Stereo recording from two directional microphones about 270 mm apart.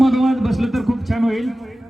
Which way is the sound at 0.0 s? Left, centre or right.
Centre.